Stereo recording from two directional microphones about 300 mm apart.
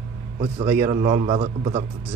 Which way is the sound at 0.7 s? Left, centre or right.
Centre.